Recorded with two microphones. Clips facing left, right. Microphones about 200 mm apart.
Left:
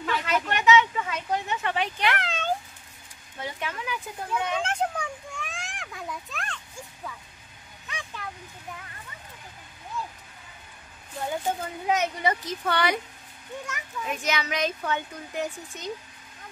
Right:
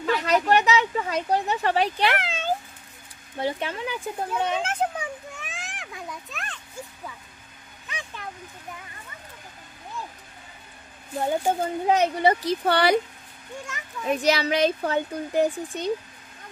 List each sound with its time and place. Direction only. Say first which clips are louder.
0.0 s a sound: right 5 dB; 40° right (ahead or behind)
2.2 s meow: right 1 dB; 5° right (ahead or behind)
3.3 s speech: right 6 dB; 30° right (ahead or behind)
4.6 s a child's voice: right 1 dB; 5° right (ahead or behind)
7.9 s a sound: right 1 dB; centre (ahead or behind)
11.6 s speech: right 6 dB; 30° right (ahead or behind)
14.0 s speech: right 8 dB; 35° right (ahead or behind)